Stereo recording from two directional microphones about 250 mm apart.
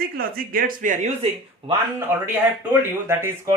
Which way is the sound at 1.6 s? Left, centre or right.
Centre.